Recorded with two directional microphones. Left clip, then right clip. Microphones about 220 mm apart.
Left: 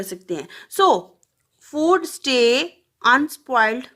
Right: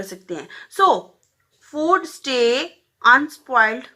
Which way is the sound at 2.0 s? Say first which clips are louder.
Left 1 dB; 50° left (ahead or behind).